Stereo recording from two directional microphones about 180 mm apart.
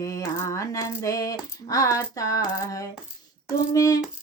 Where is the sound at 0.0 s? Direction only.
15° left (ahead or behind).